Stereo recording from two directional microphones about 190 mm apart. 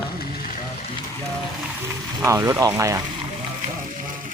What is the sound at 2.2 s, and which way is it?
Speech, 15° right (ahead or behind).